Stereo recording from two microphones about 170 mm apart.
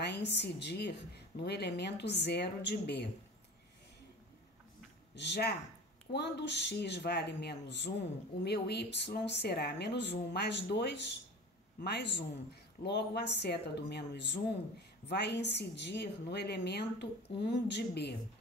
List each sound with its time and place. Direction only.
0.0 s a woman's voice: 85° left
5.1 s a woman's voice: 90° left